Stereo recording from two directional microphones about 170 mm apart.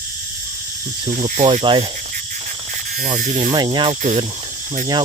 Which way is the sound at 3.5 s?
25° right (ahead or behind).